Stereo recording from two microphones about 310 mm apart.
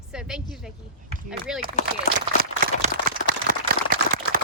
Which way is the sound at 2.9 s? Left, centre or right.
Right.